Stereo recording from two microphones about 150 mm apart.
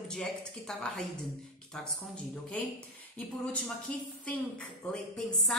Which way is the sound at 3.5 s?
10° left (ahead or behind).